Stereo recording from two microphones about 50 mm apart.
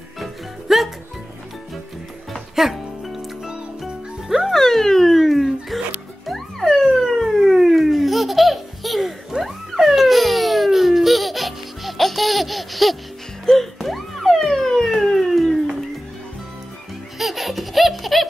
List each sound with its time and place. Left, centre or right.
0.2 s music: centre
2.5 s music: centre
4.6 s dog: centre
6.2 s police car: centre
13.5 s a sound: centre
17.2 s baby laughter: centre